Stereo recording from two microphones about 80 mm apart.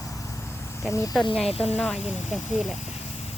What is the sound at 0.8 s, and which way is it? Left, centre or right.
Speech, left.